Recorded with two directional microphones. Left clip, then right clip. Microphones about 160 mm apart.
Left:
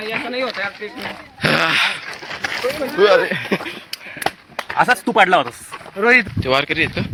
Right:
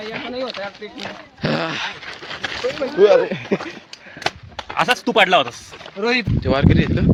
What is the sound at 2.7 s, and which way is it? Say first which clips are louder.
Speech: even; 45° right (ahead or behind).